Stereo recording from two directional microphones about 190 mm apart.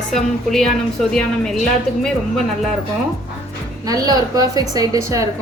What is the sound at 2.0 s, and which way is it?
Speech, 5° left (ahead or behind).